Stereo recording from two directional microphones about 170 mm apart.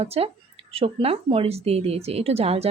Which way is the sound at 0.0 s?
35° right (ahead or behind).